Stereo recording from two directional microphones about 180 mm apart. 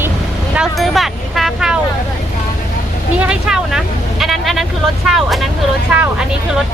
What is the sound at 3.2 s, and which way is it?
Vehicle, 5° right (ahead or behind).